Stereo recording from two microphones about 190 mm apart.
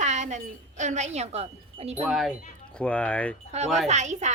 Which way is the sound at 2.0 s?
Centre (ahead or behind).